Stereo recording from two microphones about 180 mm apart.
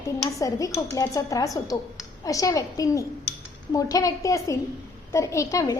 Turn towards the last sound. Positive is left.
turn(degrees=15)  # may be behind; listen again after turning